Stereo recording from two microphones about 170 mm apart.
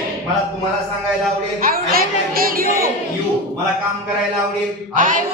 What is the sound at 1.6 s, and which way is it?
Speech, 60° right (ahead or behind).